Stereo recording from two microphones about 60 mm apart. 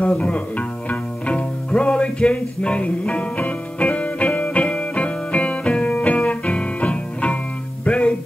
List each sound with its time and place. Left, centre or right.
0.0 s music: left